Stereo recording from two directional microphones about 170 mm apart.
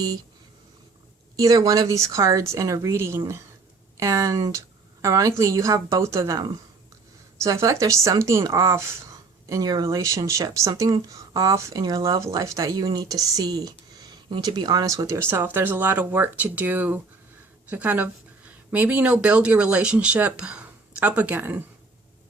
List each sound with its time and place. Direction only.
1.4 s speech: 20° right (ahead or behind)